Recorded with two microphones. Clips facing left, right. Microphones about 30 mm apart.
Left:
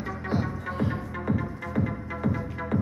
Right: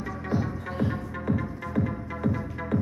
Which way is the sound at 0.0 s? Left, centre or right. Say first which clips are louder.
Even; left.